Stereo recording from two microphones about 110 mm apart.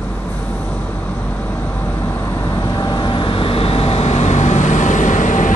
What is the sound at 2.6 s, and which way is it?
Vehicle, 35° left (ahead or behind).